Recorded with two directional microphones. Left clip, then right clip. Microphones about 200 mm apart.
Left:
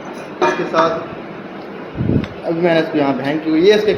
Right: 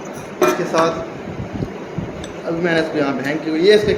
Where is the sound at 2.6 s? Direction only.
20° left (ahead or behind).